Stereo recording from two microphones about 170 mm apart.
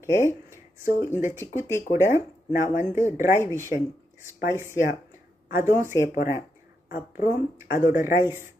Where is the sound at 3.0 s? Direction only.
15° right (ahead or behind).